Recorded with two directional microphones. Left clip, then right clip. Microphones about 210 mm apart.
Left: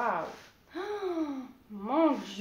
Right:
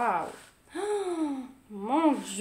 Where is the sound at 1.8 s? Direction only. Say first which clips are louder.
Right 1 dB; 55° right (ahead or behind).